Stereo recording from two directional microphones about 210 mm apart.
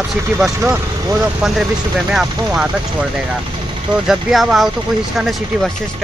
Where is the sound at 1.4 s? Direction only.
5° right (ahead or behind).